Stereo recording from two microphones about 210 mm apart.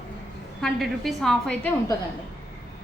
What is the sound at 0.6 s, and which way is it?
A woman's voice, centre (ahead or behind).